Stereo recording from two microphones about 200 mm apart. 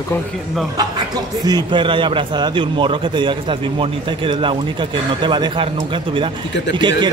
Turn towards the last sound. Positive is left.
turn(degrees=-20)  # may be behind; listen again after turning